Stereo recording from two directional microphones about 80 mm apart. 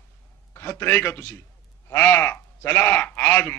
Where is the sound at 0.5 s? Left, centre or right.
Left.